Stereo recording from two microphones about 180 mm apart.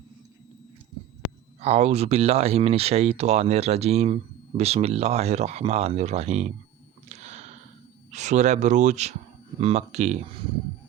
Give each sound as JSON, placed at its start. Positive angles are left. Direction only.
{"t": 1.6, "sound": "speech", "side_deg": -35}
{"t": 7.1, "sound": "a sound", "side_deg": -40}
{"t": 8.1, "sound": "speech", "side_deg": -40}